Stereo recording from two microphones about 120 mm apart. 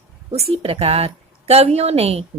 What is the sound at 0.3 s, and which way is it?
A woman's voice, 60° right (ahead or behind).